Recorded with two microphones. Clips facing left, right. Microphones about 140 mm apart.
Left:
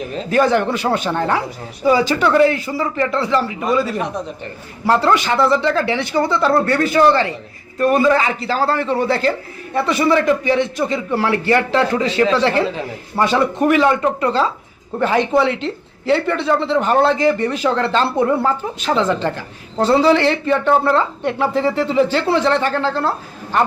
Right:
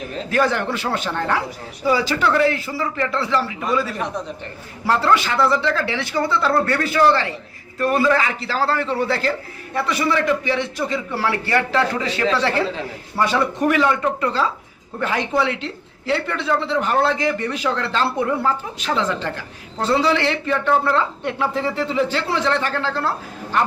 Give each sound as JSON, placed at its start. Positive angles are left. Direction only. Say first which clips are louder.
{"t": 0.3, "sound": "speech", "louder": "left 5 dB", "side_deg": 20}
{"t": 16.2, "sound": "speech", "louder": "left 6 dB", "side_deg": 40}
{"t": 16.5, "sound": "speech", "louder": "left 3 dB", "side_deg": 25}